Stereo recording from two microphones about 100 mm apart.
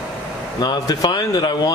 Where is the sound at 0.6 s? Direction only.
45° left (ahead or behind).